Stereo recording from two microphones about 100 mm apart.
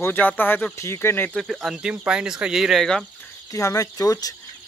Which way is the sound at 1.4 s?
Centre (ahead or behind).